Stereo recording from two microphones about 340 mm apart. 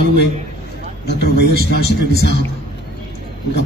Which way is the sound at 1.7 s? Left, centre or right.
Left.